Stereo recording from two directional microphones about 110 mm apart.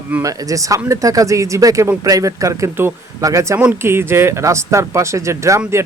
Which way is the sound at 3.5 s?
20° right (ahead or behind).